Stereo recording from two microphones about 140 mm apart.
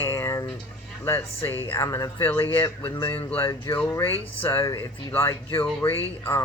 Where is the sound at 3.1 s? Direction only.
15° left (ahead or behind).